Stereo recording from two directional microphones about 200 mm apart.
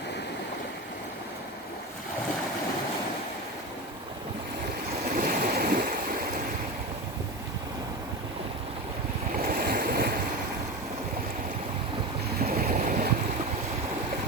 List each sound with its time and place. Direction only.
5.1 s a sound: 45° right (ahead or behind)
9.6 s boat: 50° right (ahead or behind)
12.4 s boat: 50° right (ahead or behind)